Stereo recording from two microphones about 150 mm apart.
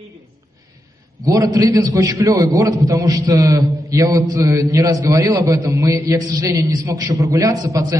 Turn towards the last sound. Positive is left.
turn(degrees=-20)  # may be behind; listen again after turning